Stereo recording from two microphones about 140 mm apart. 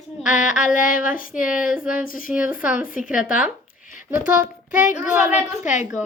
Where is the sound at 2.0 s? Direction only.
80° left.